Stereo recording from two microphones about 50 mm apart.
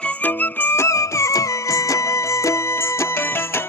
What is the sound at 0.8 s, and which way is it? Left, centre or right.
Music, left.